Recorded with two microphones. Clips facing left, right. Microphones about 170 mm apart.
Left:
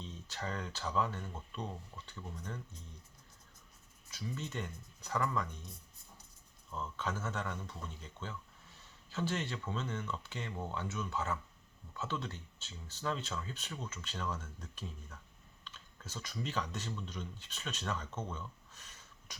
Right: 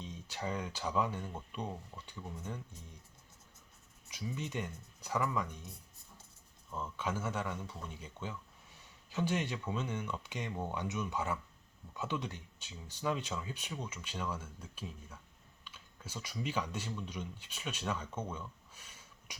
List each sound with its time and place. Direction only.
0.0 s speech: 10° right (ahead or behind)
4.3 s speech: 10° right (ahead or behind)